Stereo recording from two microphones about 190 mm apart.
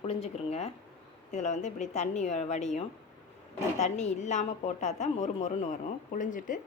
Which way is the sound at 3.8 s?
35° left (ahead or behind).